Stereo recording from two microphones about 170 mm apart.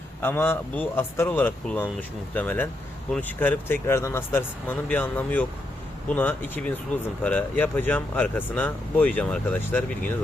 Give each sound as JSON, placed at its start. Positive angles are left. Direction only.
{"t": 0.2, "sound": "speech", "side_deg": 10}